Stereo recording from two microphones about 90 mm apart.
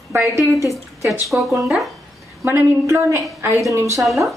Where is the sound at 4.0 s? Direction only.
Centre (ahead or behind).